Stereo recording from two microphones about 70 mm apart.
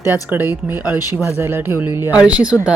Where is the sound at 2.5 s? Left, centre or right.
Centre.